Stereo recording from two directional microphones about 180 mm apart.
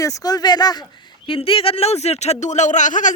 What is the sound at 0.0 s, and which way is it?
Speech, 20° left (ahead or behind).